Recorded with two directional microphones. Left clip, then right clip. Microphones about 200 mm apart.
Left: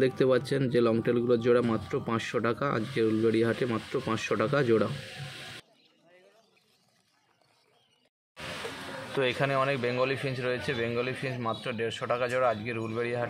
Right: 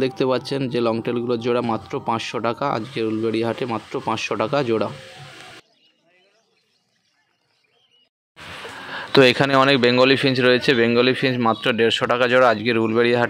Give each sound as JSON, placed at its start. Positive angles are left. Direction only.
{"t": 0.0, "sound": "speech", "side_deg": -20}
{"t": 9.1, "sound": "speech", "side_deg": -50}